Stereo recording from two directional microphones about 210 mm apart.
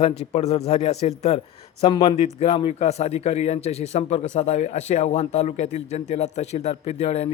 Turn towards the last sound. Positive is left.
turn(degrees=30)  # may be behind; listen again after turning